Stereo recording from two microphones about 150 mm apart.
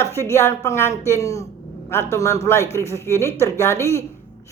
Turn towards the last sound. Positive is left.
turn(degrees=20)  # may be behind; listen again after turning